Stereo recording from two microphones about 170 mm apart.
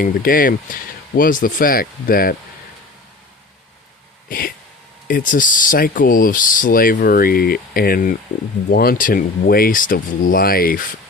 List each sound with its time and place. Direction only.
0.0 s speech: 55° left (ahead or behind)
4.3 s a sound: 55° left (ahead or behind)
5.0 s speech: 55° left (ahead or behind)